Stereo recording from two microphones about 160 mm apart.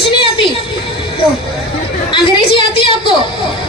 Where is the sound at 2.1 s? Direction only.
30° left (ahead or behind).